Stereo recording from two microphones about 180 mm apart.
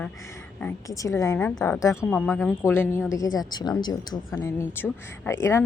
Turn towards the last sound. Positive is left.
turn(degrees=15)  # may be behind; listen again after turning